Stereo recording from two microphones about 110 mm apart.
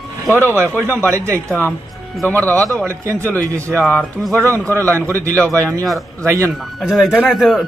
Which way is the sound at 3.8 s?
10° left (ahead or behind).